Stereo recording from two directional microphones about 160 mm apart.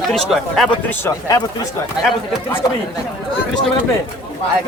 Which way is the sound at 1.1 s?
20° left (ahead or behind).